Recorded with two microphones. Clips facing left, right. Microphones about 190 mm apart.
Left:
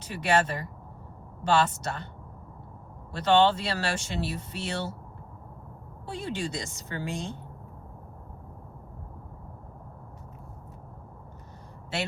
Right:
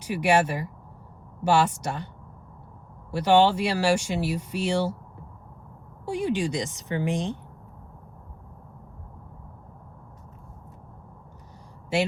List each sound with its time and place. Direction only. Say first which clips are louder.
0.0 s speech: right 4 dB; 10° right (ahead or behind)
3.1 s speech: right 2 dB; 10° right (ahead or behind)
6.1 s speech: right 7 dB; 15° right (ahead or behind)